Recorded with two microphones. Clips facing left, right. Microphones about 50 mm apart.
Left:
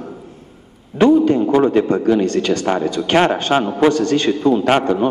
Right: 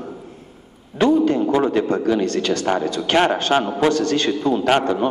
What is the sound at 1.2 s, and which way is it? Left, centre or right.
A man's voice, left.